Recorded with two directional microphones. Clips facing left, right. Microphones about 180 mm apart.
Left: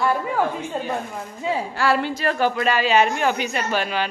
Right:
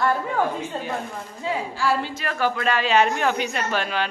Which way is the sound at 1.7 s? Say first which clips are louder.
Left 4 dB; 65° left (ahead or behind).